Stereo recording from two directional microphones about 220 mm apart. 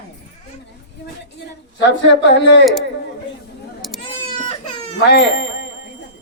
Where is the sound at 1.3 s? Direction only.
55° left (ahead or behind).